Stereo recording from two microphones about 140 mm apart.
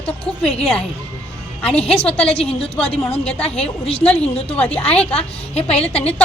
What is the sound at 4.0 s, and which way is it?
A woman's voice, 10° left (ahead or behind).